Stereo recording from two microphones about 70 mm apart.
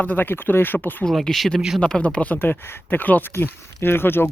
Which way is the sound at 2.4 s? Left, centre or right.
Left.